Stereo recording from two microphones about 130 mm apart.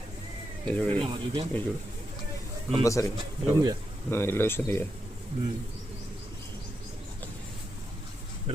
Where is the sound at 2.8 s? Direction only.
25° left (ahead or behind).